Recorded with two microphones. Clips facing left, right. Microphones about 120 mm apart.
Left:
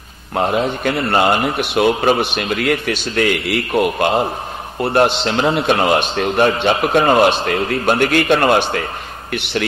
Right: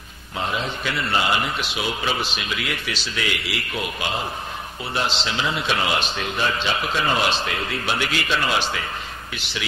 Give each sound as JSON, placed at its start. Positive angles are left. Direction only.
{"t": 0.3, "sound": "a man's voice", "side_deg": 55}